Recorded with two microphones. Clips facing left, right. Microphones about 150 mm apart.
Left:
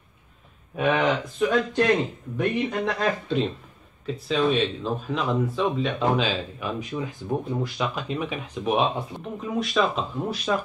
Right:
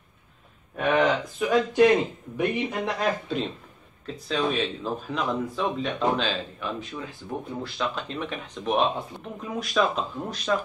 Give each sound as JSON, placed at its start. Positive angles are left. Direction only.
{"t": 0.7, "sound": "speech", "side_deg": 5}
{"t": 1.5, "sound": "speech", "side_deg": -5}